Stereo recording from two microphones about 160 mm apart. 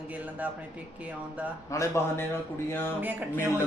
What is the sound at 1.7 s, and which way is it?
Speech, 20° left (ahead or behind).